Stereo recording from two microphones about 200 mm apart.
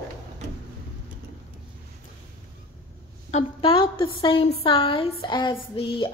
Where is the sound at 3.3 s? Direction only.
30° left (ahead or behind).